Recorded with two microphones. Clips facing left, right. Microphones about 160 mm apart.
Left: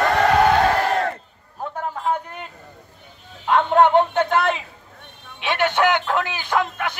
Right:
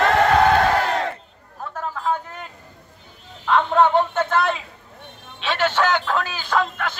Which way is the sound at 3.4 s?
15° left (ahead or behind).